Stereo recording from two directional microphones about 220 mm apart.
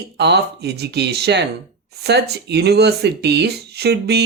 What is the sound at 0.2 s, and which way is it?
Speech, 50° right (ahead or behind).